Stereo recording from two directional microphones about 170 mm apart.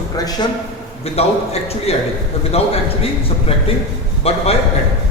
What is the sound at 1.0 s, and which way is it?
A man's voice, 35° left (ahead or behind).